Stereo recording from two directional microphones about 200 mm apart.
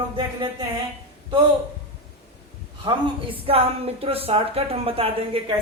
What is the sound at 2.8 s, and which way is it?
A woman's voice, 25° right (ahead or behind).